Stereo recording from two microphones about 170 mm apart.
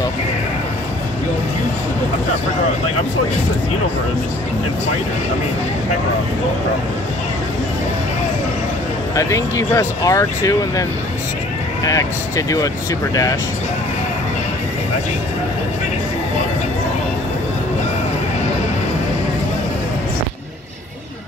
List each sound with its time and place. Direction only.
9.1 s speech: 20° left (ahead or behind)